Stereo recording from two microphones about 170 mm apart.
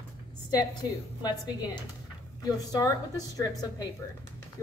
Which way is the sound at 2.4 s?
20° left (ahead or behind).